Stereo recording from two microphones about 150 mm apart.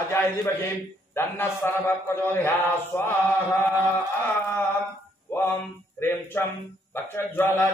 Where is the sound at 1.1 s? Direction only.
15° left (ahead or behind).